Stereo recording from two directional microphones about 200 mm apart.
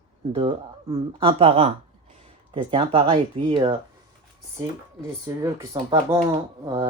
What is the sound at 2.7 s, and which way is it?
Speech, 30° right (ahead or behind).